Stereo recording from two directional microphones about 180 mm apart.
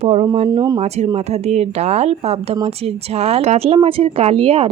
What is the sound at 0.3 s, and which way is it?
Speech, 25° right (ahead or behind).